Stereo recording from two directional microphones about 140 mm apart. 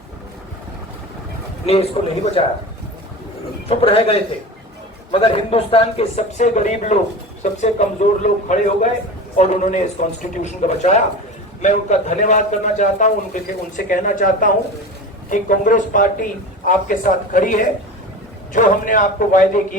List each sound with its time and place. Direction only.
1.6 s a man's voice: 45° left (ahead or behind)
3.7 s a man's voice: 40° left (ahead or behind); by 19.6 s 70° left (ahead or behind)